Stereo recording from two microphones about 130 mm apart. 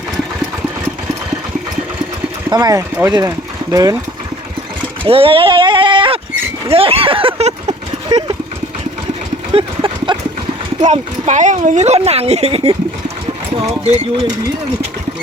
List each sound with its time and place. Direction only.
2.5 s speech: 30° right (ahead or behind)
5.0 s speech: 45° right (ahead or behind)
8.1 s speech: 30° right (ahead or behind)
9.5 s clip-clop: 45° right (ahead or behind)
10.8 s a woman's voice: 65° right (ahead or behind)
13.8 s a woman's voice: 55° right (ahead or behind)